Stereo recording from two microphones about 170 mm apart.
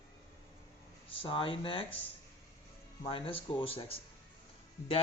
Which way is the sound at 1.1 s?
30° left (ahead or behind).